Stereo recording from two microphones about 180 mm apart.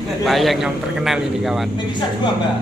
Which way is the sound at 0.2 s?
Centre (ahead or behind).